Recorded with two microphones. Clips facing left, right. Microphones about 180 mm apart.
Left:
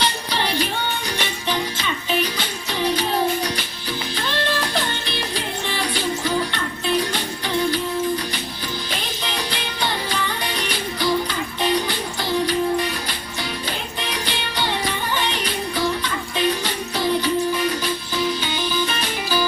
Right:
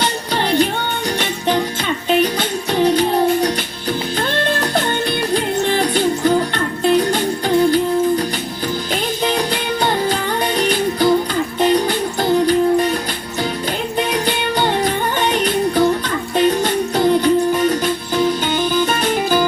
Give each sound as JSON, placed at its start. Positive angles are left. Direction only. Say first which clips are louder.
{"t": 0.0, "sound": "music", "louder": "right 4 dB", "side_deg": -50}
{"t": 4.2, "sound": "music", "louder": "right 3 dB", "side_deg": -50}
{"t": 8.9, "sound": "music", "louder": "right 9 dB", "side_deg": -45}
{"t": 14.1, "sound": "music", "louder": "right 9 dB", "side_deg": -50}